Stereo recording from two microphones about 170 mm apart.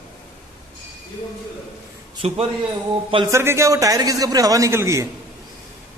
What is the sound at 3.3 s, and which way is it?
A man's voice, 15° right (ahead or behind).